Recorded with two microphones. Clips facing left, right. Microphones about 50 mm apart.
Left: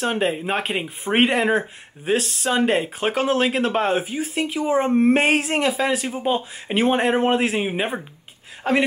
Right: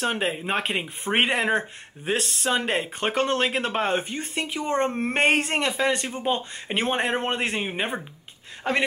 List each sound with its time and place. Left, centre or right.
0.0 s speech: centre